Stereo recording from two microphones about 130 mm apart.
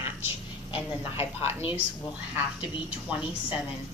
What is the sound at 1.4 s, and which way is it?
Speech, 45° left (ahead or behind).